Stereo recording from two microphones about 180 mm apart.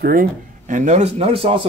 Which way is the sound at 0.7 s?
45° right (ahead or behind).